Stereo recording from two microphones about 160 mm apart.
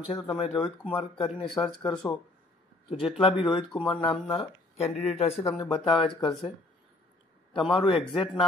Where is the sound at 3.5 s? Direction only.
30° left (ahead or behind).